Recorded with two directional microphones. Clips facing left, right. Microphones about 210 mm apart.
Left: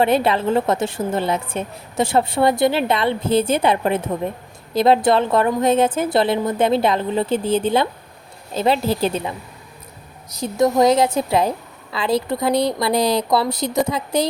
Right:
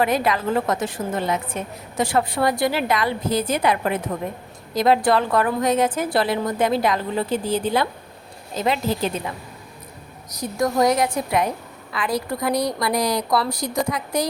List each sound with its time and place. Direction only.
0.0 s a woman's voice: 30° left (ahead or behind)
10.3 s a woman's voice: 25° left (ahead or behind)